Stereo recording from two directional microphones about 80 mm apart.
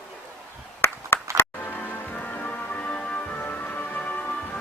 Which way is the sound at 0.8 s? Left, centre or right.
Left.